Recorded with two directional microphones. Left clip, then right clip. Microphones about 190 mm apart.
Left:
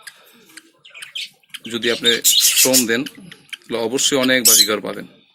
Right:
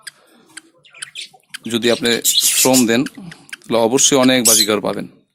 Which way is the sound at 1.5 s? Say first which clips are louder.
Right 4 dB; 55° right (ahead or behind).